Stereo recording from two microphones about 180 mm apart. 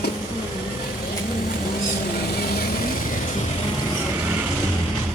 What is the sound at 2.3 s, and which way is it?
Vehicle, 60° left (ahead or behind).